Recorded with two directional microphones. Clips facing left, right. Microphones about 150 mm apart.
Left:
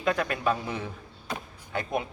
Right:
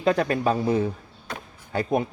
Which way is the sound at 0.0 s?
35° right (ahead or behind).